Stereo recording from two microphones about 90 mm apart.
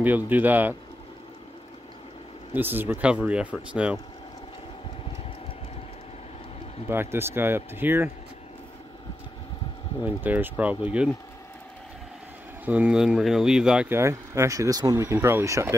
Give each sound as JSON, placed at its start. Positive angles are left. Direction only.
{"t": 0.0, "sound": "speech", "side_deg": -20}
{"t": 2.5, "sound": "speech", "side_deg": -20}
{"t": 6.9, "sound": "speech", "side_deg": -25}
{"t": 10.0, "sound": "speech", "side_deg": -20}
{"t": 12.6, "sound": "speech", "side_deg": -15}
{"t": 13.8, "sound": "speech", "side_deg": -30}